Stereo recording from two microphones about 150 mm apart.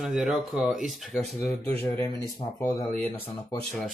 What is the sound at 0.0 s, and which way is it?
Speech, 5° right (ahead or behind).